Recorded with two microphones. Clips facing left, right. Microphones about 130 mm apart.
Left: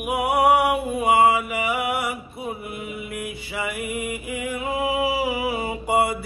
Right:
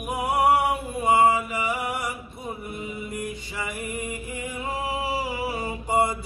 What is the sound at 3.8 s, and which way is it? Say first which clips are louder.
Mantra: left 3 dB; 10° left (ahead or behind).